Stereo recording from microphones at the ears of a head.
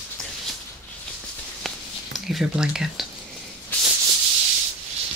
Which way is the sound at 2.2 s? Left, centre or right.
Centre.